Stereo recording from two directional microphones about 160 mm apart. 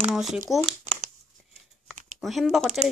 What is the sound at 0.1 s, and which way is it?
Speech, 5° right (ahead or behind).